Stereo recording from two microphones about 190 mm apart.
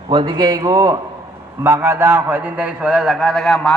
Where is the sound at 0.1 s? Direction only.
25° right (ahead or behind).